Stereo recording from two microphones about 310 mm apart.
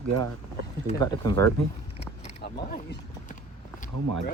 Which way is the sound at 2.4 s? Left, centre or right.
Left.